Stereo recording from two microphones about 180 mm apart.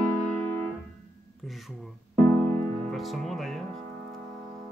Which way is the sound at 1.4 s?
Centre (ahead or behind).